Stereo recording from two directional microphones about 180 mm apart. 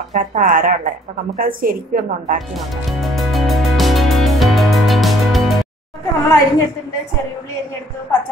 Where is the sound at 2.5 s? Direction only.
Centre (ahead or behind).